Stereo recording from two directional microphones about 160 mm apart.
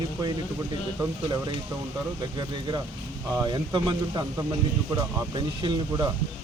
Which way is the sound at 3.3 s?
25° right (ahead or behind).